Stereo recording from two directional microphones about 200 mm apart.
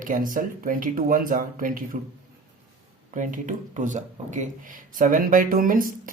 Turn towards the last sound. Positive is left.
turn(degrees=-45)  # may be behind; listen again after turning